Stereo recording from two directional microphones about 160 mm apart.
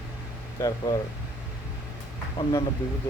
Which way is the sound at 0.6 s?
15° left (ahead or behind).